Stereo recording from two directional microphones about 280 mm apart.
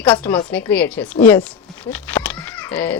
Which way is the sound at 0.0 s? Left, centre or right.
Centre.